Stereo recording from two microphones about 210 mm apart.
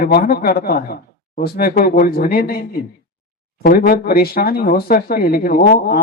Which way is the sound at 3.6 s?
45° left (ahead or behind).